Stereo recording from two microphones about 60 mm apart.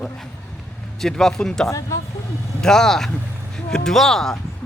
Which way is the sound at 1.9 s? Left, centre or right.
Left.